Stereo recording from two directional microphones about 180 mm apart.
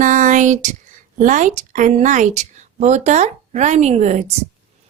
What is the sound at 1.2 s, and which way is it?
A woman's voice, 45° right (ahead or behind).